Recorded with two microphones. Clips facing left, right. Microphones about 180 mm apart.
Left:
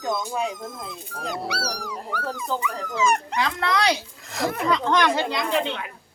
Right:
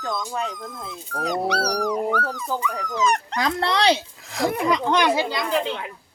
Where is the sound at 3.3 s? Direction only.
35° right (ahead or behind).